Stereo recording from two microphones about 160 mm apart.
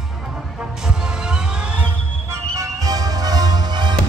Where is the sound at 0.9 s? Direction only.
5° right (ahead or behind).